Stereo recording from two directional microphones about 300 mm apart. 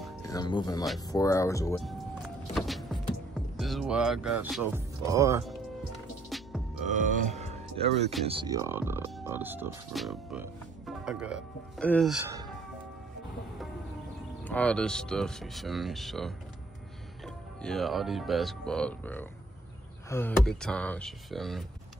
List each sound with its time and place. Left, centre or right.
0.3 s speech: centre
1.8 s vehicle: centre
2.5 s power windows: centre
3.3 s speech: centre
6.3 s music: centre
6.9 s speech: right; by 12.2 s centre
14.4 s speech: centre
17.6 s speech: centre